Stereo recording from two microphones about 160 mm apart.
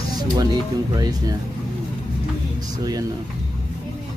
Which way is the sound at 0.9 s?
25° right (ahead or behind).